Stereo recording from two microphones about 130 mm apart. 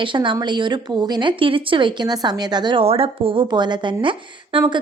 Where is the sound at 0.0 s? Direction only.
40° right (ahead or behind).